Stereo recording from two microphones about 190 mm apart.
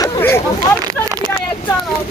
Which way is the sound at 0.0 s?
15° left (ahead or behind).